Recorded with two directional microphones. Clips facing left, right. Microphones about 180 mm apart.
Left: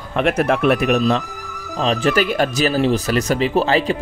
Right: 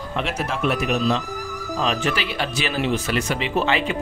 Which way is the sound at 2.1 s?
45° left (ahead or behind).